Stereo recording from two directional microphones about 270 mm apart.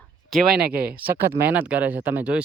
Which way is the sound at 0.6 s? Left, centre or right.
Right.